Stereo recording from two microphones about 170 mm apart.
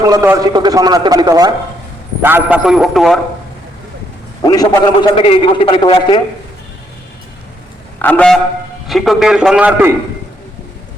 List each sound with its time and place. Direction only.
0.0 s a man's voice: 20° right (ahead or behind)
2.2 s a man's voice: 10° right (ahead or behind)
4.4 s a man's voice: 20° left (ahead or behind)
7.9 s a sound: 10° left (ahead or behind)
8.9 s a man's voice: centre (ahead or behind)